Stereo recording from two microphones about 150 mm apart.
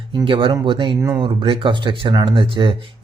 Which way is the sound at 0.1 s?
35° right (ahead or behind).